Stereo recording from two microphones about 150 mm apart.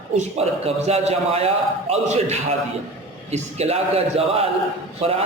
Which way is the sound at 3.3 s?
45° right (ahead or behind).